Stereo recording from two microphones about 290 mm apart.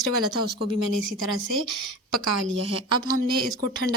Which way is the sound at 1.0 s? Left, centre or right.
Right.